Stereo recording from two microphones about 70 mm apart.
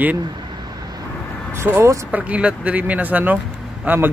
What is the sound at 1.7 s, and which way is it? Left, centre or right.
Speech, right.